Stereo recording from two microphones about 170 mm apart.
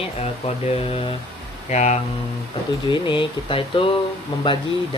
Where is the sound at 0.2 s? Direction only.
35° left (ahead or behind).